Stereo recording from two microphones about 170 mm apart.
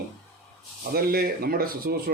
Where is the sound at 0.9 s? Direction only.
65° right (ahead or behind).